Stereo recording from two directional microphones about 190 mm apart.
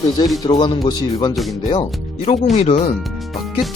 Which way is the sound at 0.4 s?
25° left (ahead or behind).